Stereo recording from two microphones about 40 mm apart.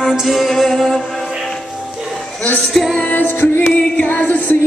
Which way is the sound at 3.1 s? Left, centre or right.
Left.